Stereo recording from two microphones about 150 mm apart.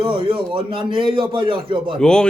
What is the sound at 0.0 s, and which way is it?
Speech, 35° right (ahead or behind).